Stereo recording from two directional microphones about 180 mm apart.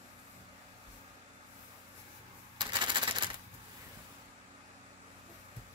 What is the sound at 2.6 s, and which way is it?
Typewriter, 25° right (ahead or behind).